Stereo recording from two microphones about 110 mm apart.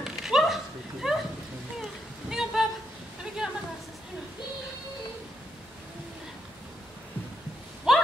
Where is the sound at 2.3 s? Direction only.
5° right (ahead or behind).